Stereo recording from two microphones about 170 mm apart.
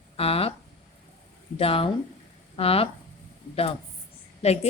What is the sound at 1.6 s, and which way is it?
A woman's voice, 35° left (ahead or behind).